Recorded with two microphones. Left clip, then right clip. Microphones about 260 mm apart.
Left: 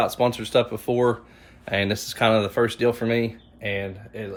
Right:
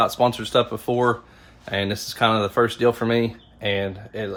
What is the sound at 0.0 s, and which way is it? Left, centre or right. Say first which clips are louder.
Speech: right 3 dB; centre.